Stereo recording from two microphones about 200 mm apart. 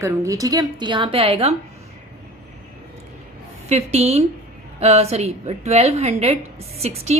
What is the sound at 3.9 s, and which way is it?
A woman's voice, 30° right (ahead or behind).